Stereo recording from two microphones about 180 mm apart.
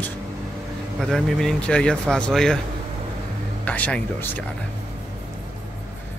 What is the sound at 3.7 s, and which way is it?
Speech, 10° left (ahead or behind).